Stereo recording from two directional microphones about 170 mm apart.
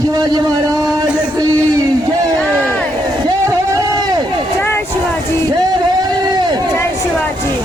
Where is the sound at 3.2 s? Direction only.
20° right (ahead or behind).